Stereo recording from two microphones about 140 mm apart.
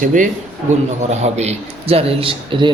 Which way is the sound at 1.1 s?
50° right (ahead or behind).